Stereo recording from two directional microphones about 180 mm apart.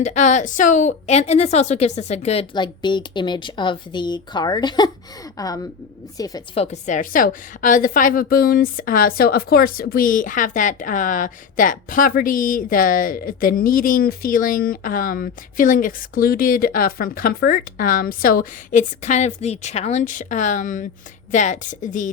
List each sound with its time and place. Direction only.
0.0 s a woman's voice: 40° left (ahead or behind); by 6.4 s 20° left (ahead or behind)
6.5 s a woman's voice: 35° left (ahead or behind)